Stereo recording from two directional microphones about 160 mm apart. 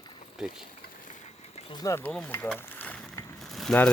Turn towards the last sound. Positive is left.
turn(degrees=0)  # may be behind; listen again after turning